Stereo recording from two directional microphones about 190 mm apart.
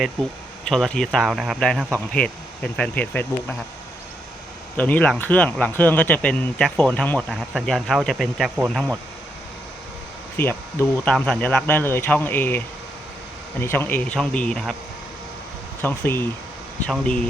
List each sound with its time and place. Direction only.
0.7 s speech: 5° left (ahead or behind)
4.8 s speech: 10° left (ahead or behind)
10.3 s speech: 10° left (ahead or behind)
15.8 s speech: 10° left (ahead or behind)